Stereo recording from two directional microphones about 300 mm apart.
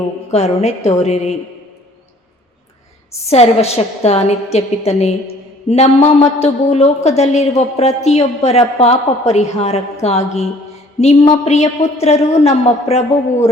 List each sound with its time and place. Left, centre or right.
0.3 s a woman's voice: left
3.2 s a woman's voice: left